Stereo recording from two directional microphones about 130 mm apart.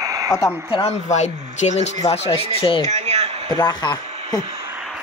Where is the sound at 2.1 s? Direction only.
45° left (ahead or behind).